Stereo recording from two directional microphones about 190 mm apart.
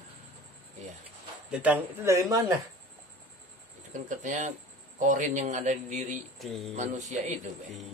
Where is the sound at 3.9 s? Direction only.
40° right (ahead or behind).